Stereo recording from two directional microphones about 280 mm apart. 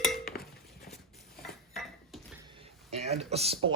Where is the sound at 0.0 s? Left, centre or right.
Centre.